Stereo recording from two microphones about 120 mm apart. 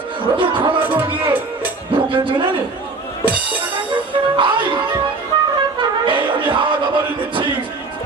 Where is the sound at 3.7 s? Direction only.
45° right (ahead or behind).